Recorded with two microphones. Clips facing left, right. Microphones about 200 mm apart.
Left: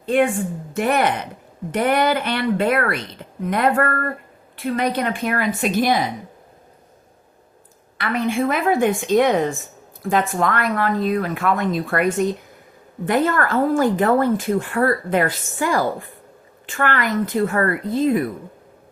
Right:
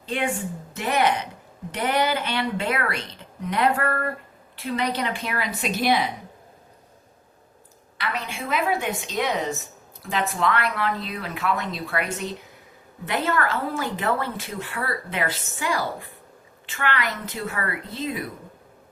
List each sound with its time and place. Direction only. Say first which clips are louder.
0.0 s a woman's voice: left 9 dB; 50° left (ahead or behind)
7.9 s a woman's voice: left 10 dB; 50° left (ahead or behind)